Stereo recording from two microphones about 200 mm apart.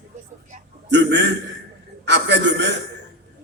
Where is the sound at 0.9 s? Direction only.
60° right (ahead or behind).